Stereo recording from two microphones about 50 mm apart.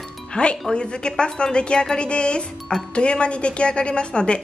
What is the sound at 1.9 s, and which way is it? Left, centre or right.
A woman's voice, left.